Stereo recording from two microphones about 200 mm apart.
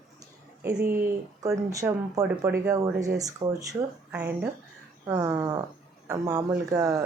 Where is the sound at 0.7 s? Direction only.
10° right (ahead or behind).